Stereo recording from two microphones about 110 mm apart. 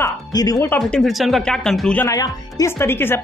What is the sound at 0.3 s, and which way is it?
Speech, 35° left (ahead or behind).